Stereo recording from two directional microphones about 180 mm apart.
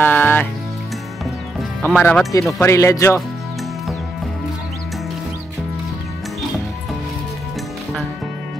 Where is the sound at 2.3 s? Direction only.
15° left (ahead or behind).